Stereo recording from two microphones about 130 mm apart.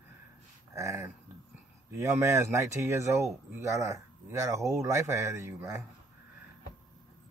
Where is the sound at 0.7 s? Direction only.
25° right (ahead or behind).